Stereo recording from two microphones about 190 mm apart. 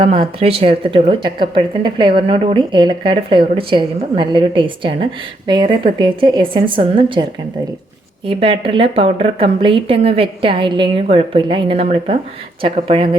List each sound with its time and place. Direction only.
0.0 s speech: 30° right (ahead or behind)
8.3 s speech: 30° right (ahead or behind)